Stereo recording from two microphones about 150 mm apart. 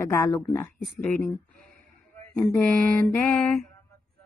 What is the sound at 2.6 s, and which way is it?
Mantra, 15° left (ahead or behind).